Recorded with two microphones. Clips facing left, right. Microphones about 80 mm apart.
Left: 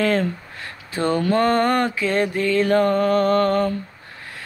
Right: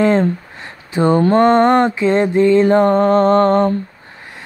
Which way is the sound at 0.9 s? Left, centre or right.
Right.